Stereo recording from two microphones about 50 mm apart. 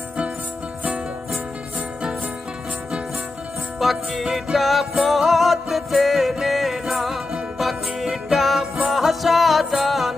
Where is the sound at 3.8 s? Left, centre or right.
Centre.